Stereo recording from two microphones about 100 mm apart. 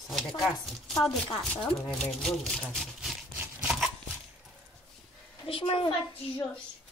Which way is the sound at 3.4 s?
15° right (ahead or behind).